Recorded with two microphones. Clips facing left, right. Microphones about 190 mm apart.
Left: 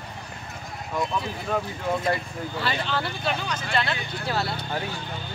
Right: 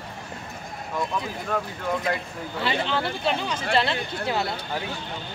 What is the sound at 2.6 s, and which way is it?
Speech, 20° right (ahead or behind).